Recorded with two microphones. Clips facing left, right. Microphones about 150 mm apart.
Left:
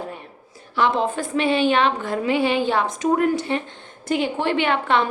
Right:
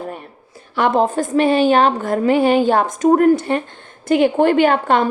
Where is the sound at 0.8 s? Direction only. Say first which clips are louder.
Right 5 dB; 45° right (ahead or behind).